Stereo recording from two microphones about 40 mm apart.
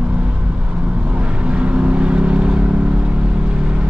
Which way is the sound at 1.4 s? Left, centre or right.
Right.